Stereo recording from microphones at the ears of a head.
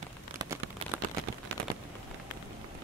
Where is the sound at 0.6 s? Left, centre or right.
Right.